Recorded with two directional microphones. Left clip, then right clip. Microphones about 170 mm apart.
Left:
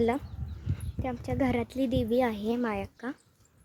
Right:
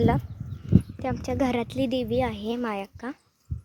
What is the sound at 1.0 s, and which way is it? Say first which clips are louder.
A woman's voice: right 4 dB; 15° right (ahead or behind).